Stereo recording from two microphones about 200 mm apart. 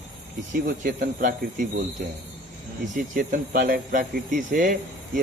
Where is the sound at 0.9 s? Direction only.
40° right (ahead or behind).